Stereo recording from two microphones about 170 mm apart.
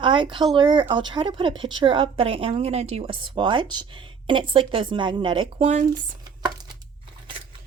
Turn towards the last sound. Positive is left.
turn(degrees=-25)  # may be behind; listen again after turning